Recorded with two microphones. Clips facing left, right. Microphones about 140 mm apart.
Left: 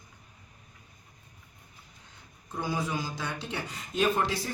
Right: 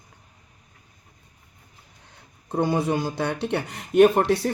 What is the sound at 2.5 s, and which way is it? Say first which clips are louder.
Speech: right 9 dB; 60° right (ahead or behind).